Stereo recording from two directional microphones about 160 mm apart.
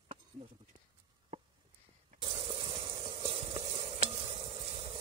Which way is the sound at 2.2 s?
35° right (ahead or behind).